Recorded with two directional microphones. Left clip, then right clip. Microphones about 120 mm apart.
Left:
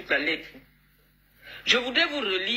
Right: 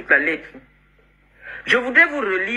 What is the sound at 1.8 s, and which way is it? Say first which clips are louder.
Speech: right 9 dB; 40° right (ahead or behind).